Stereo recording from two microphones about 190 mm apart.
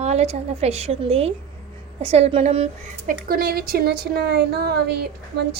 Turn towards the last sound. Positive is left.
turn(degrees=-60)  # may be behind; listen again after turning